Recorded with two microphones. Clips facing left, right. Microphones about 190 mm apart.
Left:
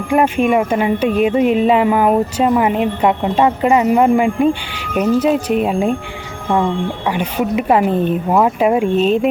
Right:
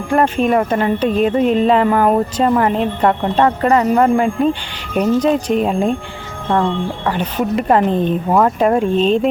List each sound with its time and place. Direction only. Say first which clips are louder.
0.1 s speech: left 1 dB; 10° left (ahead or behind)